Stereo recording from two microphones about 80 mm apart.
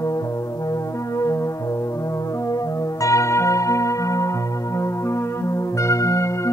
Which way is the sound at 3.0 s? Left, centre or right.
Left.